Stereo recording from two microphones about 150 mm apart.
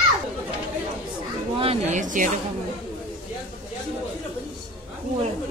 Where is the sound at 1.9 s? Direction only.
60° right (ahead or behind).